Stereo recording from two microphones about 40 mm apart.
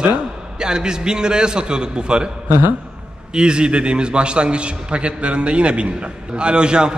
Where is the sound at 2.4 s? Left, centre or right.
Right.